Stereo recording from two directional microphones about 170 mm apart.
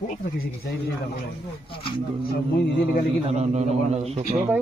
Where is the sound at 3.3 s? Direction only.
40° right (ahead or behind).